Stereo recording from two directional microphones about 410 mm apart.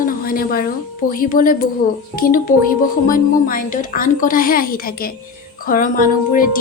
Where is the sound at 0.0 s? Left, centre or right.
Left.